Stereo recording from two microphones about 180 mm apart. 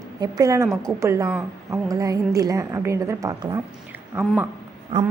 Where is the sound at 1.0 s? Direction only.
15° right (ahead or behind).